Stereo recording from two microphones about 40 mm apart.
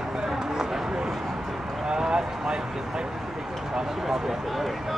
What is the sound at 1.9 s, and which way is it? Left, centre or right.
Speech, centre.